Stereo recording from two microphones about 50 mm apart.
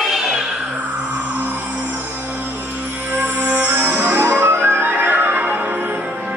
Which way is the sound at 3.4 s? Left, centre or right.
Right.